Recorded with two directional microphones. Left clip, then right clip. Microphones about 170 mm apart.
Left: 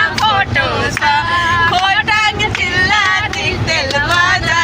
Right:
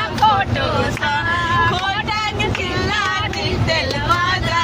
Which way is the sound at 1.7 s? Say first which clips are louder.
Left 7 dB; 10° left (ahead or behind).